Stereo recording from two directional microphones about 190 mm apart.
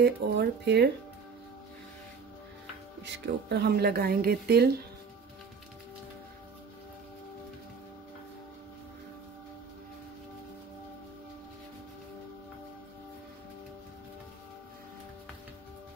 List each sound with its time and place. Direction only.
0.0 s speech: 60° right (ahead or behind)
3.0 s speech: 60° right (ahead or behind)